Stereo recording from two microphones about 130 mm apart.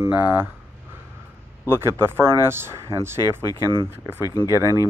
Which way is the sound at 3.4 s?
30° left (ahead or behind).